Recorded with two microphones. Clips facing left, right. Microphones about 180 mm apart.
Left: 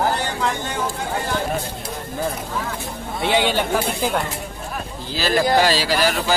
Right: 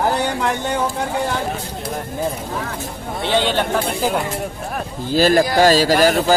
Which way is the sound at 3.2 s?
10° left (ahead or behind).